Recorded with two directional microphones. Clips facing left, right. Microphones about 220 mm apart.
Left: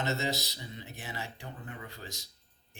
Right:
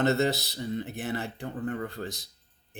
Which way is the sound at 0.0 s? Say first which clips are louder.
Right 8 dB; 60° right (ahead or behind).